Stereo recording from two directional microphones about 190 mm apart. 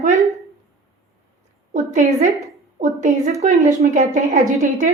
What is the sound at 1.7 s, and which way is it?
Speech, 40° right (ahead or behind).